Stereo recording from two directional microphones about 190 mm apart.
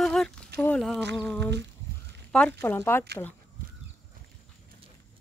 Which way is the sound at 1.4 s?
65° right (ahead or behind).